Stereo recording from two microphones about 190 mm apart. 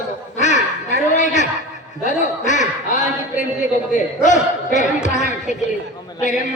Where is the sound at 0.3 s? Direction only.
40° left (ahead or behind).